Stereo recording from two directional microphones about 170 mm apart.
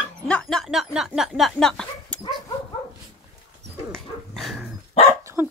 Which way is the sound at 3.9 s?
Centre (ahead or behind).